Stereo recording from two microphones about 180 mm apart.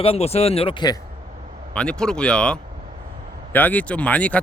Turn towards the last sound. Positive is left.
turn(degrees=10)  # may be behind; listen again after turning